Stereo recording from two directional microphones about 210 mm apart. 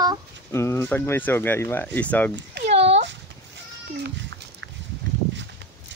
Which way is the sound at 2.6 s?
30° right (ahead or behind).